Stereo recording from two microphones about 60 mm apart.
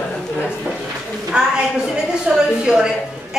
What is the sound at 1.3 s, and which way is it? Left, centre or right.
Speech, centre.